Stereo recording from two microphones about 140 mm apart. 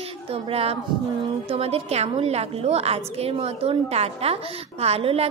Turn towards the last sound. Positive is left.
turn(degrees=-45)  # may be behind; listen again after turning